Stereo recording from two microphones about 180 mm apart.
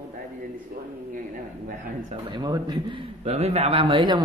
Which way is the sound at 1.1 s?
50° right (ahead or behind).